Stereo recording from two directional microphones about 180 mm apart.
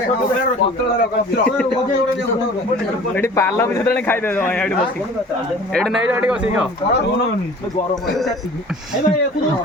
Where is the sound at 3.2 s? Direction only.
15° left (ahead or behind).